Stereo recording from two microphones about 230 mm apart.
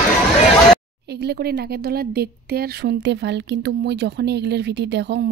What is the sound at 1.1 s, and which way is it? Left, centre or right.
A woman's voice, right.